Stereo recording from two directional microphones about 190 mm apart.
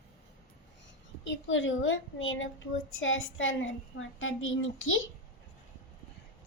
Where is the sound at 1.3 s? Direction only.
80° left.